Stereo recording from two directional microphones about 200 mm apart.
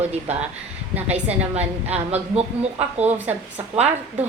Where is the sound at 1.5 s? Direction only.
30° right (ahead or behind).